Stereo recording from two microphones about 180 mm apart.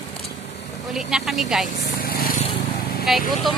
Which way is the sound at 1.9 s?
55° left (ahead or behind).